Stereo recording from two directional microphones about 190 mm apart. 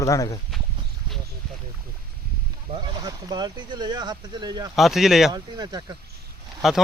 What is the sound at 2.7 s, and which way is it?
Speech, 25° right (ahead or behind).